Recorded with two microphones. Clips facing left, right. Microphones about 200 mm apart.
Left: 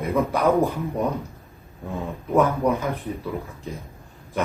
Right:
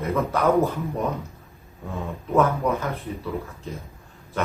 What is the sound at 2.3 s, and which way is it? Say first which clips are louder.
Speech: left 1 dB; 15° left (ahead or behind).